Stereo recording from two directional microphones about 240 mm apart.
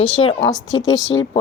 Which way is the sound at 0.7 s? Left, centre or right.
Left.